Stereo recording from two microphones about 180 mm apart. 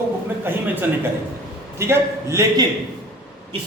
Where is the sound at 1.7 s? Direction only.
15° right (ahead or behind).